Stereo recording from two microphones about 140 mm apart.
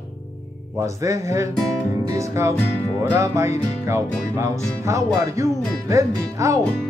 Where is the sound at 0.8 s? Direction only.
20° right (ahead or behind).